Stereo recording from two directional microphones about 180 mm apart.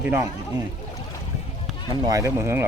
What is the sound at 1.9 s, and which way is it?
Speech, 20° right (ahead or behind).